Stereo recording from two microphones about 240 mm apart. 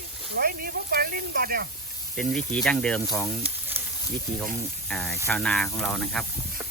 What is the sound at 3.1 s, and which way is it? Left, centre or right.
Frying, centre.